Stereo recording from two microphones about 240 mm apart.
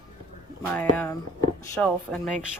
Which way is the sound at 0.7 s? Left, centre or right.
Centre.